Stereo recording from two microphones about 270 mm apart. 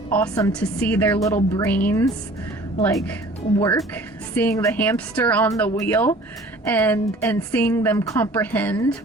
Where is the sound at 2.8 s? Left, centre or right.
Centre.